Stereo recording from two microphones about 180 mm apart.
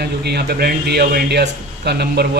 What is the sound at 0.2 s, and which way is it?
Speech, 65° right (ahead or behind).